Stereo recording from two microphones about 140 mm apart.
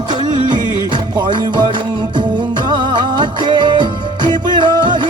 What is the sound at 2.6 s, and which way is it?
Music, 35° right (ahead or behind).